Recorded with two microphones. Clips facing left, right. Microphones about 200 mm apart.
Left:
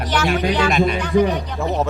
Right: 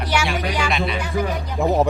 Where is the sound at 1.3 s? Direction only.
10° right (ahead or behind).